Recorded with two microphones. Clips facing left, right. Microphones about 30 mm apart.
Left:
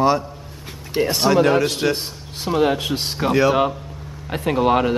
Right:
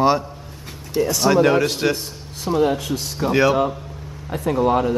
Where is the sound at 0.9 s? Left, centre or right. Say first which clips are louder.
Even; left.